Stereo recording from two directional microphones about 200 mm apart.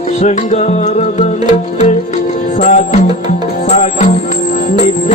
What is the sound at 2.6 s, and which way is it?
Music, 35° left (ahead or behind).